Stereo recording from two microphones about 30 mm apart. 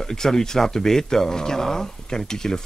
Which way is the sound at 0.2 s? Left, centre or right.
Centre.